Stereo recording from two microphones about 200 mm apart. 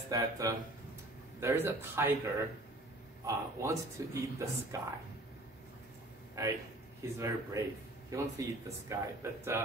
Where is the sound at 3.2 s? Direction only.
15° right (ahead or behind).